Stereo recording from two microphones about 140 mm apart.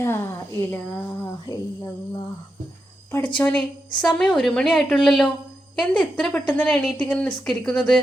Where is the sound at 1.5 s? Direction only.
25° left (ahead or behind).